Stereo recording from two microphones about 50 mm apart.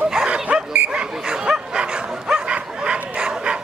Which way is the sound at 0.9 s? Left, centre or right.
Centre.